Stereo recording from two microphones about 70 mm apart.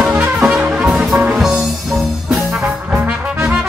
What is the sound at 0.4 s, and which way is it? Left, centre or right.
Music, centre.